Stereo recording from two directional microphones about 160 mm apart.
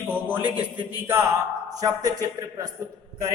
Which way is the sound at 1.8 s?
25° right (ahead or behind).